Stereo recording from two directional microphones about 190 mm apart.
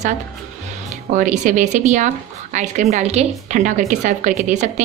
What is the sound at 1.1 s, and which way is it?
A woman's voice, 40° right (ahead or behind).